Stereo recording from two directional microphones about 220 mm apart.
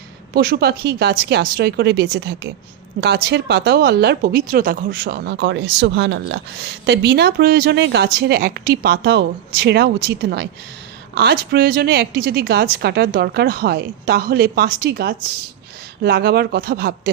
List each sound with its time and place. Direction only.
0.3 s speech: 45° right (ahead or behind)